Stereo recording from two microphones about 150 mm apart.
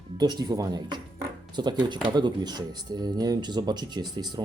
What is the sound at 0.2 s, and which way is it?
Speech, 30° right (ahead or behind).